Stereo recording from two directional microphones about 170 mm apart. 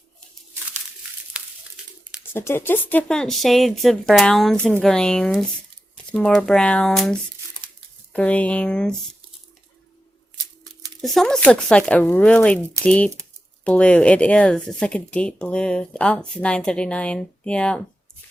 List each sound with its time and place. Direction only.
2.3 s speech: 15° left (ahead or behind)
10.3 s a sound: 25° right (ahead or behind)
11.0 s speech: centre (ahead or behind)